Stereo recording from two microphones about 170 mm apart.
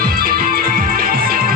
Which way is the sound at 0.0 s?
60° right (ahead or behind).